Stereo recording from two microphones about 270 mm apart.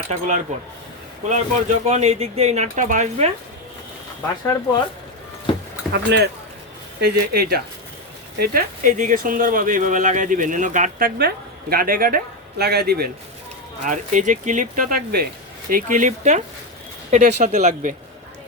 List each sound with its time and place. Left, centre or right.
0.1 s speech: right
5.9 s speech: right